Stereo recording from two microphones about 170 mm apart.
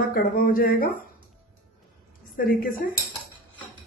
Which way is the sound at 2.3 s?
55° left (ahead or behind).